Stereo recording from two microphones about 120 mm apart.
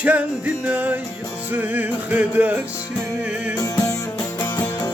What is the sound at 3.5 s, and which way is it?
Music, 30° left (ahead or behind).